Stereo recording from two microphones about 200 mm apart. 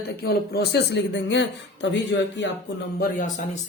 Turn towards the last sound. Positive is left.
turn(degrees=40)  # may be behind; listen again after turning